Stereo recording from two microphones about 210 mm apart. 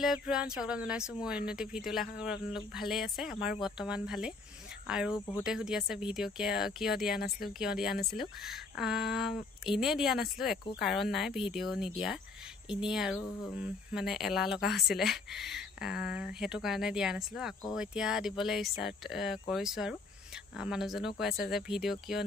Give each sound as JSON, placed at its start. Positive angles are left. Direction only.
{"t": 0.0, "sound": "speech", "side_deg": 0}
{"t": 5.1, "sound": "speech", "side_deg": 20}
{"t": 5.4, "sound": "speech", "side_deg": -5}
{"t": 7.2, "sound": "speech", "side_deg": 45}
{"t": 7.5, "sound": "speech", "side_deg": -5}